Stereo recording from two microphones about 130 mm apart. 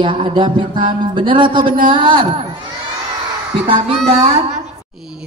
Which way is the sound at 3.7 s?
45° right (ahead or behind).